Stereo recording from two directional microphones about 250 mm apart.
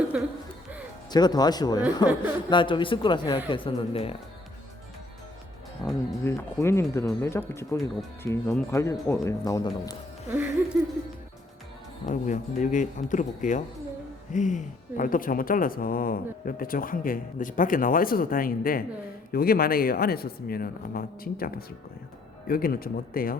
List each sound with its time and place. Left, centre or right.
0.1 s speech: centre
1.1 s speech: centre
5.8 s speech: centre
12.0 s speech: left